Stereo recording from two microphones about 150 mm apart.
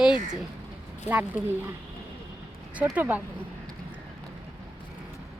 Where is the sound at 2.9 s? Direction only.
10° right (ahead or behind).